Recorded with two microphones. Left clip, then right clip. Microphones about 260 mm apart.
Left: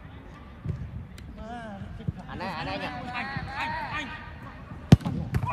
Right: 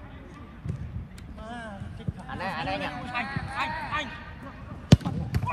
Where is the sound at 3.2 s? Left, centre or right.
Left.